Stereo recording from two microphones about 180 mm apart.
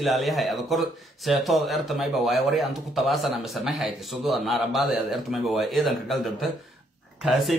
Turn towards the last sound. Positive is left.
turn(degrees=0)  # may be behind; listen again after turning